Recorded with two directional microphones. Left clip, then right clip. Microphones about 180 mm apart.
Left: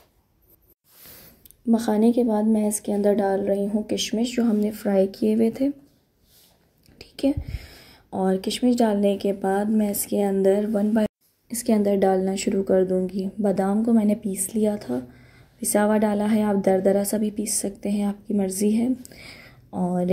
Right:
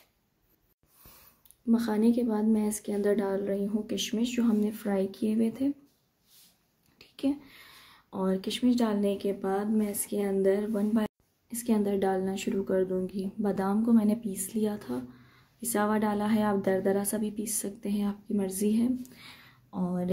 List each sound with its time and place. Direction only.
1.7 s speech: 15° left (ahead or behind)
7.0 s speech: 20° left (ahead or behind)